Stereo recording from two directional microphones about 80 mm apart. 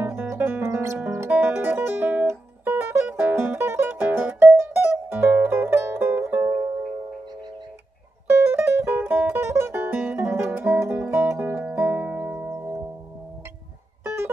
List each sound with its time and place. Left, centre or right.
0.0 s music: right
8.3 s music: right
11.7 s music: centre
14.0 s music: right